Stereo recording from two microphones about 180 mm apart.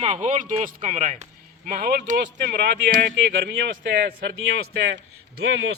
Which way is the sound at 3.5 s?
65° right (ahead or behind).